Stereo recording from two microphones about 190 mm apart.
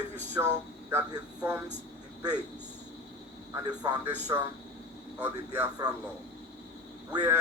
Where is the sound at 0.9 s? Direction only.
15° right (ahead or behind).